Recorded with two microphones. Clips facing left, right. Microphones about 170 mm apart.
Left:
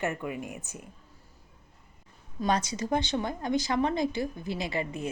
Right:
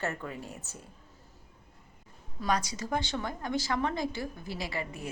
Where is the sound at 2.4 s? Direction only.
25° left (ahead or behind).